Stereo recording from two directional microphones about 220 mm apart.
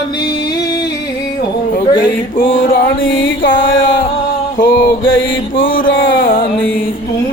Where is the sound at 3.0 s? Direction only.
60° left (ahead or behind).